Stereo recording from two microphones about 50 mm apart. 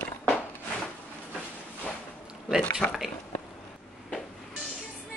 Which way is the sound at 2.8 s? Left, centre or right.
Left.